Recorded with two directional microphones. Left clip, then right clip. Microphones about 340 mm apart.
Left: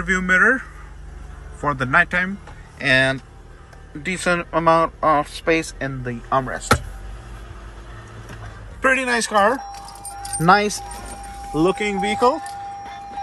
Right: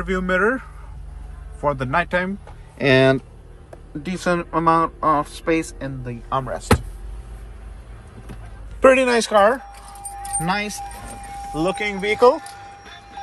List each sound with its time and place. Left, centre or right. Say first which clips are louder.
0.0 s a man's voice: left 4 dB; centre
4.0 s a man's voice: left 2 dB; centre
8.8 s a man's voice: right 4 dB; centre
10.4 s speech: left 9 dB; left
11.5 s speech: left 3 dB; centre